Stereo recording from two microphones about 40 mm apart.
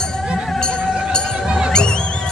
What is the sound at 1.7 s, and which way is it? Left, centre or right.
Music, left.